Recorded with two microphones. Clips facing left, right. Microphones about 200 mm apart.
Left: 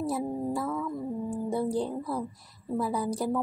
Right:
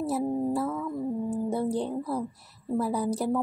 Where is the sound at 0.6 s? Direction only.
5° right (ahead or behind).